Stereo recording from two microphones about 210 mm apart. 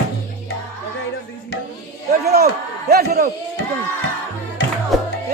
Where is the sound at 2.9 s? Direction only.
45° right (ahead or behind).